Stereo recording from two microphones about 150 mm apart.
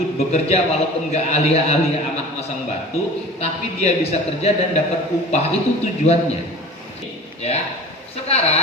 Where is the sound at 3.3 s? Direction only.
45° left (ahead or behind).